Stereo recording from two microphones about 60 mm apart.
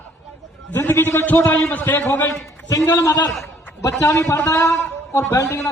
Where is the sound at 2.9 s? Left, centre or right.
Left.